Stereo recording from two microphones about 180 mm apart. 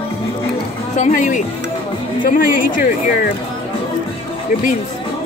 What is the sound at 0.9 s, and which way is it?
A woman's voice, 45° left (ahead or behind).